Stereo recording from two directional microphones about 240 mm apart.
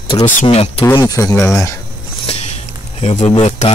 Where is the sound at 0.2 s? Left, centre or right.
Left.